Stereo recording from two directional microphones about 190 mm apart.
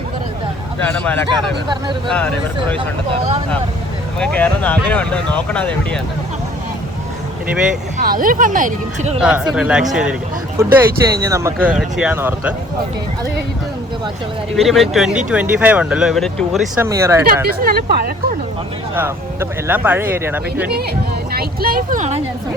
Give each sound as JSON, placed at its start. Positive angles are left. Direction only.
{"t": 0.8, "sound": "speech", "side_deg": 5}
{"t": 1.6, "sound": "speech", "side_deg": -25}
{"t": 2.0, "sound": "speech", "side_deg": 10}
{"t": 4.2, "sound": "speech", "side_deg": 10}
{"t": 7.9, "sound": "speech", "side_deg": -45}
{"t": 9.2, "sound": "speech", "side_deg": -5}
{"t": 11.7, "sound": "speech", "side_deg": -5}
{"t": 14.5, "sound": "speech", "side_deg": 0}
{"t": 16.8, "sound": "speech", "side_deg": -15}
{"t": 17.2, "sound": "speech", "side_deg": -50}
{"t": 18.9, "sound": "speech", "side_deg": -10}
{"t": 21.3, "sound": "speech", "side_deg": -50}